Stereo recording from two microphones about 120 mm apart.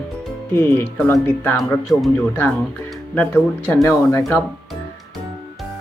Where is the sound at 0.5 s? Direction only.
20° left (ahead or behind).